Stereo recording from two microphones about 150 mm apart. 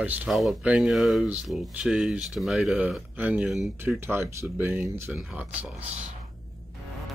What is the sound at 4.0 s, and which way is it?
Speech, 15° right (ahead or behind).